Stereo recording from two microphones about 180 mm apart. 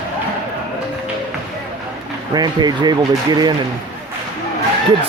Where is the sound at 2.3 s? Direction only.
20° right (ahead or behind).